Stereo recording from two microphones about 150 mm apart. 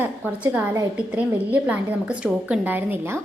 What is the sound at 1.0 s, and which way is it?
A woman's voice, 10° right (ahead or behind).